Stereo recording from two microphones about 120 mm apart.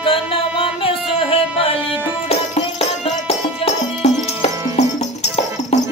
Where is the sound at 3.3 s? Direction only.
60° left (ahead or behind).